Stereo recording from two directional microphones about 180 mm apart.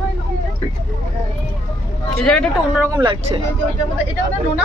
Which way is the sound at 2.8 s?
20° right (ahead or behind).